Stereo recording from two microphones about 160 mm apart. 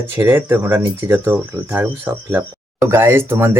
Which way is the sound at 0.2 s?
15° right (ahead or behind).